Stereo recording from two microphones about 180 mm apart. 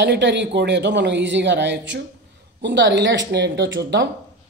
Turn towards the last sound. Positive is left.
turn(degrees=-85)